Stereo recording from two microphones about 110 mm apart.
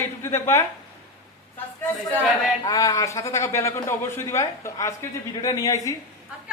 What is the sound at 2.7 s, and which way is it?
A man's voice, 30° left (ahead or behind).